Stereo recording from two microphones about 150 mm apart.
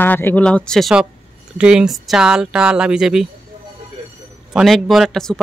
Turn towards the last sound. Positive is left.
turn(degrees=0)  # may be behind; listen again after turning